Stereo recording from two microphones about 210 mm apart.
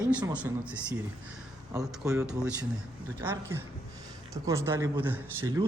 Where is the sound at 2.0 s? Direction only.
5° right (ahead or behind).